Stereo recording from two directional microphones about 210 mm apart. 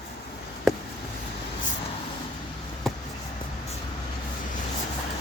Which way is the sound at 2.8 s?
Centre (ahead or behind).